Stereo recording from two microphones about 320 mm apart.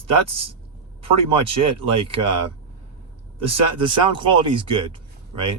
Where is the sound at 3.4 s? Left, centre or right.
Centre.